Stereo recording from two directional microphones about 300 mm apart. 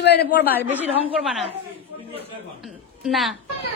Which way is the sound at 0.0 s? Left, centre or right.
Left.